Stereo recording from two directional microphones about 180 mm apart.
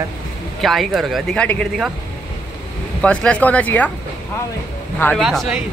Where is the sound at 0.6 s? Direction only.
Centre (ahead or behind).